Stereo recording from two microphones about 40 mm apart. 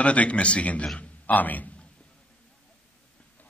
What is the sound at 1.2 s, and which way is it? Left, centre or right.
Speech, left.